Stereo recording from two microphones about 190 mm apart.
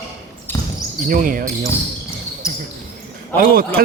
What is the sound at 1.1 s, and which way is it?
Speech, 45° right (ahead or behind).